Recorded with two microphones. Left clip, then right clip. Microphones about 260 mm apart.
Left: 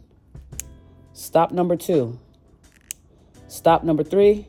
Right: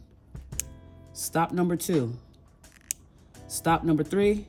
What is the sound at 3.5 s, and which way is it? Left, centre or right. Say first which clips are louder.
Speech: left 7 dB; right.